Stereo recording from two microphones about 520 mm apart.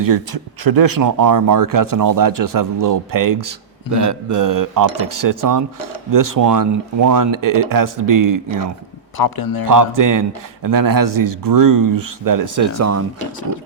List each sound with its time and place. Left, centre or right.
0.6 s a man's voice: right
9.1 s a man's voice: left
9.6 s a man's voice: right